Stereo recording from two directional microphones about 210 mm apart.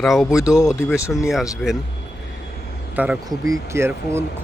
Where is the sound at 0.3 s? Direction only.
15° left (ahead or behind).